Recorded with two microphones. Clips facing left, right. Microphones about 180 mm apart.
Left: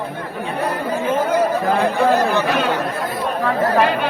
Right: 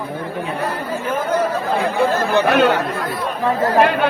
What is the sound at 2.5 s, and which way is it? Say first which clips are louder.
Speech: right 4 dB; 65° right (ahead or behind).